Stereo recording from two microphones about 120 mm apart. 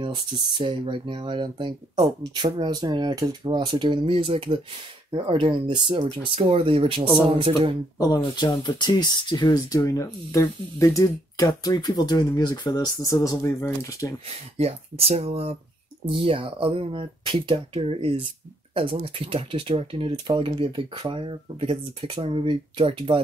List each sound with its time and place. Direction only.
0.0 s speech: 40° right (ahead or behind)
8.0 s speech: 30° left (ahead or behind)
14.6 s speech: 55° right (ahead or behind)